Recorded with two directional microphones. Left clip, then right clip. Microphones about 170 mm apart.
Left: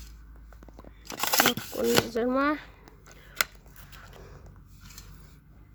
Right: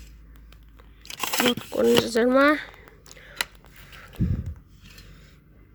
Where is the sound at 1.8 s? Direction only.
10° left (ahead or behind).